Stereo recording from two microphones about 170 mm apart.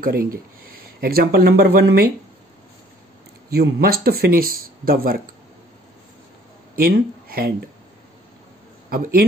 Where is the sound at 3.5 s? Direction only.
65° right (ahead or behind).